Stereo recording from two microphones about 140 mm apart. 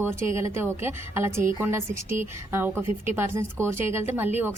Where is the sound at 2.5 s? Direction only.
15° right (ahead or behind).